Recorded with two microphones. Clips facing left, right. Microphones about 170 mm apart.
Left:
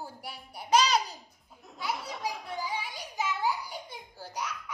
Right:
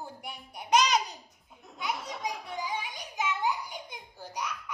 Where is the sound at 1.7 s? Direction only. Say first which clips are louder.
Even; centre (ahead or behind).